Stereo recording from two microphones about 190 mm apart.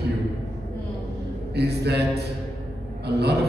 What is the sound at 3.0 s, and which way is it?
Speech, 60° right (ahead or behind).